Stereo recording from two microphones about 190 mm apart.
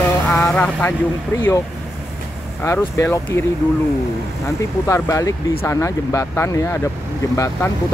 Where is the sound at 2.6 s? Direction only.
15° left (ahead or behind).